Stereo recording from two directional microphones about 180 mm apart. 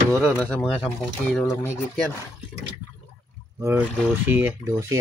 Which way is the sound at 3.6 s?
15° right (ahead or behind).